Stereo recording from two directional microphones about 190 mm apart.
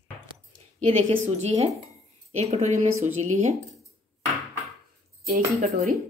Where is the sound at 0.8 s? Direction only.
35° right (ahead or behind).